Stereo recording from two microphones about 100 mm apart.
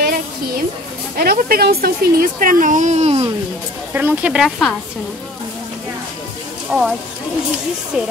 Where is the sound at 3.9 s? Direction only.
20° right (ahead or behind).